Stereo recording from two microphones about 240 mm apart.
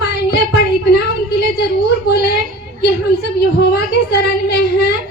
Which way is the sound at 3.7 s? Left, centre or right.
Left.